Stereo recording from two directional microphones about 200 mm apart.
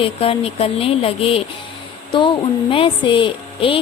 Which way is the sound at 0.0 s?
30° left (ahead or behind).